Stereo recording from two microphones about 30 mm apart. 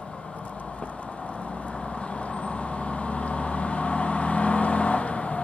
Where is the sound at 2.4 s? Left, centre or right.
Left.